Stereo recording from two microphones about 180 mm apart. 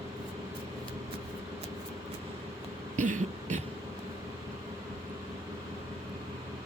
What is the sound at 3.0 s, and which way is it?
Throat clearing, 45° right (ahead or behind).